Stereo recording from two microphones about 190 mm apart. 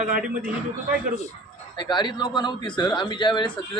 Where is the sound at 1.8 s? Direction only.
25° left (ahead or behind).